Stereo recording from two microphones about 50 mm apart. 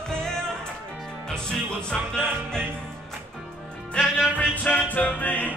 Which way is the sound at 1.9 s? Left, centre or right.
Centre.